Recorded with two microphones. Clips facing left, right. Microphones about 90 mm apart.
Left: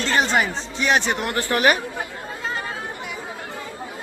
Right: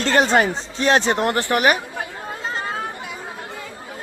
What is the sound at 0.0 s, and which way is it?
Speech, 45° right (ahead or behind).